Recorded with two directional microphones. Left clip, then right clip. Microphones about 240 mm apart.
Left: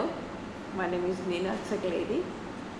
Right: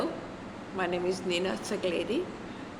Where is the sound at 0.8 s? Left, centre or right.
Right.